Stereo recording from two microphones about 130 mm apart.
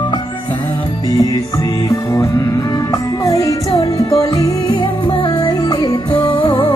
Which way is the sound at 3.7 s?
25° left (ahead or behind).